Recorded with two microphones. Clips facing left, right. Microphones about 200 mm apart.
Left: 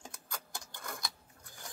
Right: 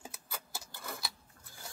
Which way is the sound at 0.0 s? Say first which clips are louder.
Even; 5° right (ahead or behind).